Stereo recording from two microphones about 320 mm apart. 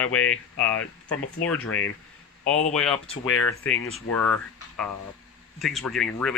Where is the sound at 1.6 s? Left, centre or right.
Left.